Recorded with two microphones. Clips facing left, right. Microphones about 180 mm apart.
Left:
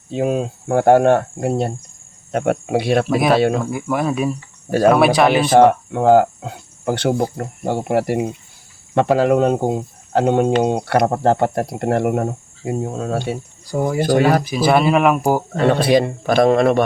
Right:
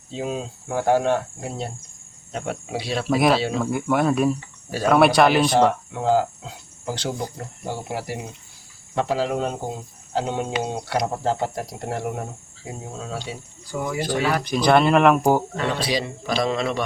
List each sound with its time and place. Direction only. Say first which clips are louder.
0.1 s speech: left 9 dB; 60° left (ahead or behind)
3.1 s speech: right 3 dB; centre (ahead or behind)
3.3 s speech: left 8 dB; 55° left (ahead or behind)
3.6 s speech: even; centre (ahead or behind)
5.5 s speech: left 7 dB; 60° left (ahead or behind)
13.7 s speech: left 8 dB; 40° left (ahead or behind)
14.4 s speech: left 2 dB; 5° left (ahead or behind)
15.5 s a man's voice: left 10 dB; 55° left (ahead or behind)